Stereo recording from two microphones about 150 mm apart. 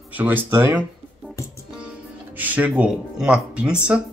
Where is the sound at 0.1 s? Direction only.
10° right (ahead or behind).